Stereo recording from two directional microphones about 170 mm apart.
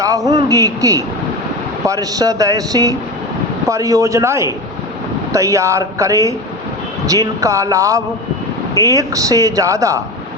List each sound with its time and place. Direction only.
0.0 s speech: 20° right (ahead or behind)